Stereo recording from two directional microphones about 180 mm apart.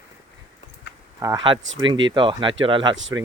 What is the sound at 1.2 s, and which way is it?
Speech, 20° right (ahead or behind).